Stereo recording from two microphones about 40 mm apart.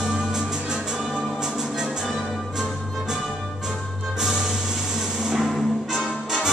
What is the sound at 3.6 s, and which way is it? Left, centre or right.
Music, centre.